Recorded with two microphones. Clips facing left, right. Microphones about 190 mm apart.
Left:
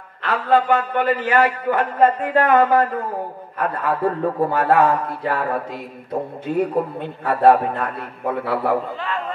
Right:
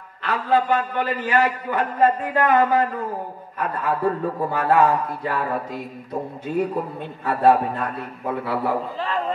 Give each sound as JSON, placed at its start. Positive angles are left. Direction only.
{"t": 0.2, "sound": "a man's voice", "side_deg": 55}